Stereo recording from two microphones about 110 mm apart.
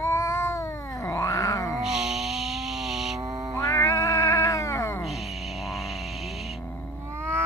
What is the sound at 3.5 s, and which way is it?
Cat, 30° left (ahead or behind).